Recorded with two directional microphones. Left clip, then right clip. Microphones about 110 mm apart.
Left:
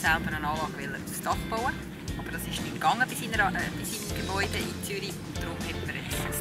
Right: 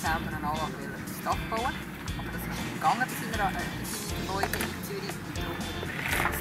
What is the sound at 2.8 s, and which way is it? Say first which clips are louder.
Speech: left 1 dB; 40° left (ahead or behind).